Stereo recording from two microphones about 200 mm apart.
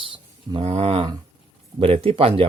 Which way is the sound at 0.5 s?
30° right (ahead or behind).